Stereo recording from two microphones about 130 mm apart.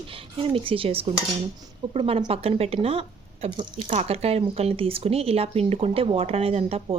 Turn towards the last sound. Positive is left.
turn(degrees=-50)  # may be behind; listen again after turning